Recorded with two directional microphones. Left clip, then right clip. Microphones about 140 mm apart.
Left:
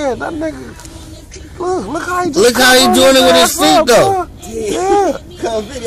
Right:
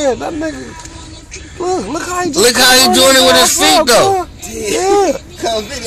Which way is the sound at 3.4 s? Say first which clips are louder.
Right 1 dB; 45° right (ahead or behind).